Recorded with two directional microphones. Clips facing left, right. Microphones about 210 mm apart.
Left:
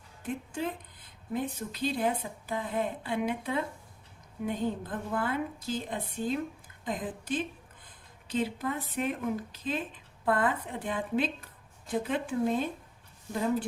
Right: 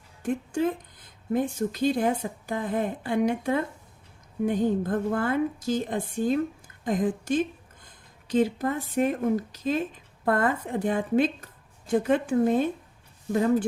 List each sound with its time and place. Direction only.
0.2 s a woman's voice: 45° right (ahead or behind)
13.3 s speech: 65° right (ahead or behind)